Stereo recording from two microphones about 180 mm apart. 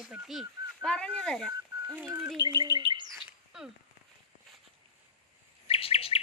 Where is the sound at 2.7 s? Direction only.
25° right (ahead or behind).